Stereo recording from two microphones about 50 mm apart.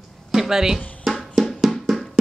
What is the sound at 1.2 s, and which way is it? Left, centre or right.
Music, centre.